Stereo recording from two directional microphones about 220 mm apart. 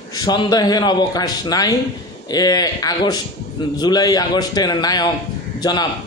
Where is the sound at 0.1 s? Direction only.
20° left (ahead or behind).